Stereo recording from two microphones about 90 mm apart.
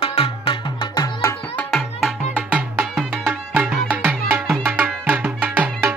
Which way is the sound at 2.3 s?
15° right (ahead or behind).